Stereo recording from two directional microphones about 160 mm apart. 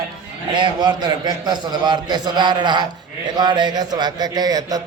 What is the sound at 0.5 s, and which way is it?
A man's voice, 30° right (ahead or behind).